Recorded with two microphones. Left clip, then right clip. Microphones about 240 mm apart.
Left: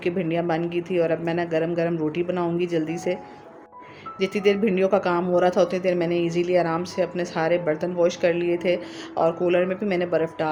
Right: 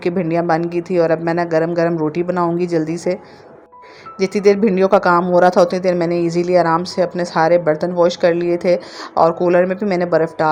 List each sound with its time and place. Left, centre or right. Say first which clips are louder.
0.0 s speech: right 7 dB; right
4.2 s speech: right 8 dB; right